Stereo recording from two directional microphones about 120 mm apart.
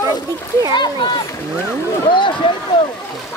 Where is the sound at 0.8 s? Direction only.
40° left (ahead or behind).